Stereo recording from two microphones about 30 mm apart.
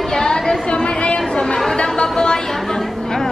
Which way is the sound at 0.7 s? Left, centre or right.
Left.